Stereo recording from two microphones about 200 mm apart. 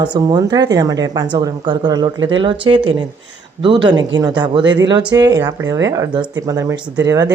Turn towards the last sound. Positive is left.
turn(degrees=-15)  # may be behind; listen again after turning